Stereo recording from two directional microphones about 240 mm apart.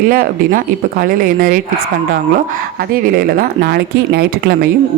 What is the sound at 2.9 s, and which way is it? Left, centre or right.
Speech, right.